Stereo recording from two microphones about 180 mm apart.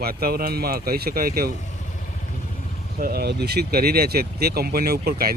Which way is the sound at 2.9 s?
60° right (ahead or behind).